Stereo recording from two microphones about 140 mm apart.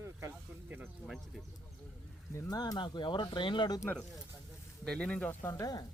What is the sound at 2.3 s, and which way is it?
Speech, 25° left (ahead or behind).